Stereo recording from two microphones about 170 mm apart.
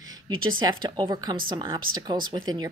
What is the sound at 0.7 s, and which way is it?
A woman's voice, 25° right (ahead or behind).